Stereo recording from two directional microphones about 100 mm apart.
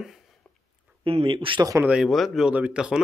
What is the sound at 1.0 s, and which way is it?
Speech, 65° right (ahead or behind).